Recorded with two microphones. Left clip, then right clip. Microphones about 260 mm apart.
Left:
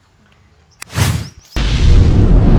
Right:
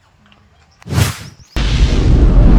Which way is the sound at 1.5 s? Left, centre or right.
Centre.